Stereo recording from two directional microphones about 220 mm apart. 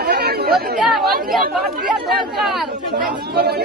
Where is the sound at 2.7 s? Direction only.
40° right (ahead or behind).